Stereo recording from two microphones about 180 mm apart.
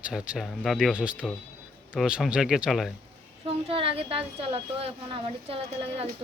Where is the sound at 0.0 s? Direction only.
5° right (ahead or behind).